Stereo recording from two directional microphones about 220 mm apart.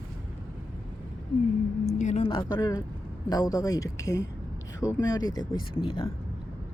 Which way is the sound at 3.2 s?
15° left (ahead or behind).